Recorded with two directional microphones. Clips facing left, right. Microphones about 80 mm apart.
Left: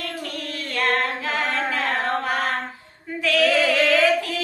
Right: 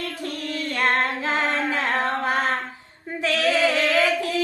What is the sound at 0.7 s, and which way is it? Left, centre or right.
Female singing, right.